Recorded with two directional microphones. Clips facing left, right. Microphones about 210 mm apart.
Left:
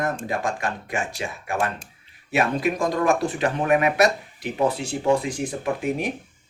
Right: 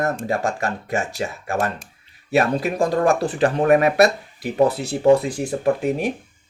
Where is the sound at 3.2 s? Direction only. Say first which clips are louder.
Right 5 dB; 35° right (ahead or behind).